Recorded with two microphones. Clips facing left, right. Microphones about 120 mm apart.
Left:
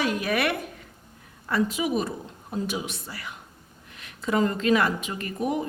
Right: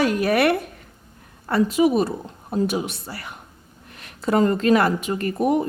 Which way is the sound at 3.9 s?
50° right (ahead or behind).